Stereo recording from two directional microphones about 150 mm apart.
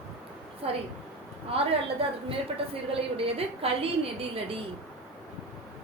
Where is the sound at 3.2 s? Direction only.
40° right (ahead or behind).